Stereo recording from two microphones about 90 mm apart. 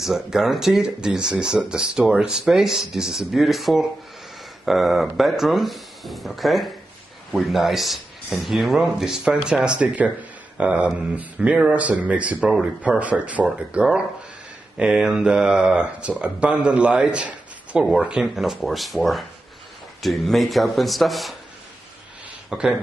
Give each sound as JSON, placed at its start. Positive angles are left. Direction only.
{"t": 0.0, "sound": "a man's voice", "side_deg": -5}
{"t": 22.5, "sound": "speech", "side_deg": -5}